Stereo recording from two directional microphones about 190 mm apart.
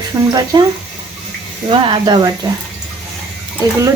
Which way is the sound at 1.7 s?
25° right (ahead or behind).